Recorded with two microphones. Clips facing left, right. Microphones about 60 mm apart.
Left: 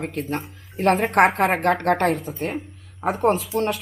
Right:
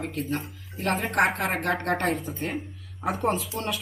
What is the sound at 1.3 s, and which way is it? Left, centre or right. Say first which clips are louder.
A woman's voice: left 7 dB; left.